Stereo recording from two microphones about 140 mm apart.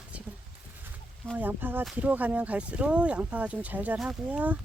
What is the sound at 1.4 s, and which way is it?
Speech, 15° right (ahead or behind).